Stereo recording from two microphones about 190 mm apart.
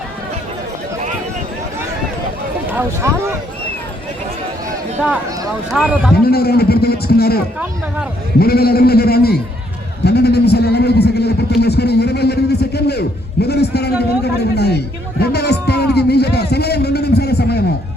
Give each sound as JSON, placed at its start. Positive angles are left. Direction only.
{"t": 2.7, "sound": "speech", "side_deg": -15}
{"t": 5.7, "sound": "speech", "side_deg": -5}
{"t": 6.3, "sound": "a man's voice", "side_deg": 55}
{"t": 8.4, "sound": "a man's voice", "side_deg": 55}
{"t": 10.0, "sound": "a sound", "side_deg": 60}
{"t": 14.3, "sound": "speech", "side_deg": 60}
{"t": 15.2, "sound": "music", "side_deg": 60}